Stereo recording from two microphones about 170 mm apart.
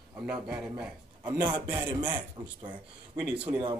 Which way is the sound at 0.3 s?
5° right (ahead or behind).